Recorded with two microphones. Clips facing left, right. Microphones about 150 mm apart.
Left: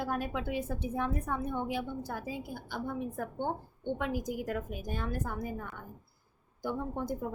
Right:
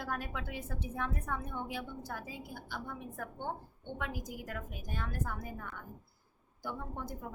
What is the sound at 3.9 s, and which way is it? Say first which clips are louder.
A woman's voice: left 6 dB; 25° left (ahead or behind).